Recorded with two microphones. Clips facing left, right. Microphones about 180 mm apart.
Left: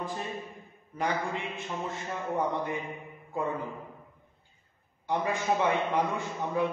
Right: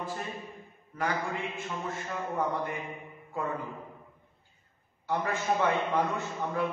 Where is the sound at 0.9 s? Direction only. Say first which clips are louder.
Left 1 dB; 20° left (ahead or behind).